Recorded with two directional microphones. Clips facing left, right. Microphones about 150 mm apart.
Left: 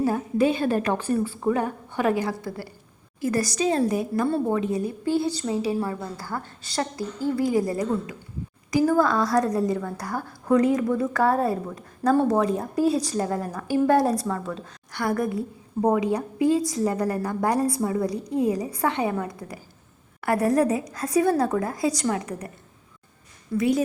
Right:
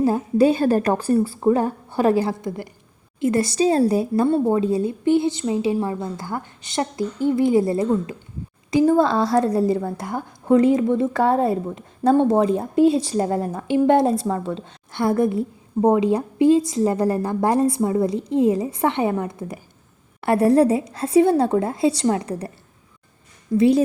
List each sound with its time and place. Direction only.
0.0 s a woman's voice: 30° right (ahead or behind)
23.6 s a woman's voice: 30° right (ahead or behind)